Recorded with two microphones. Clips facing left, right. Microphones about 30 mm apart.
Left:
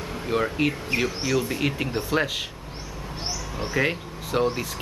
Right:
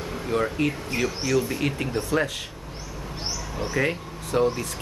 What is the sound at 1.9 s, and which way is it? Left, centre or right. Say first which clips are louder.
Speech: even; left.